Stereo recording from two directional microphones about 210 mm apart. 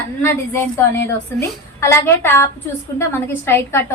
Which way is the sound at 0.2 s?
10° left (ahead or behind).